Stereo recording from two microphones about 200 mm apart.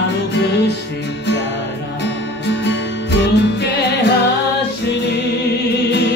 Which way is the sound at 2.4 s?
60° left (ahead or behind).